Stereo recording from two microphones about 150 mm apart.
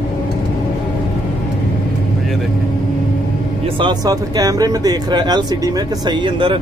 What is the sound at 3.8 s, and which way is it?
Speech, 30° right (ahead or behind).